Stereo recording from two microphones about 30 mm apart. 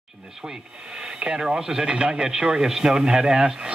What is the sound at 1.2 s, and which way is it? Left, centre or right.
Speech, right.